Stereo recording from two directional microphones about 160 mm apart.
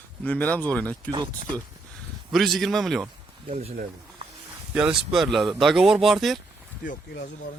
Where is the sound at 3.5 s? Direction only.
40° right (ahead or behind).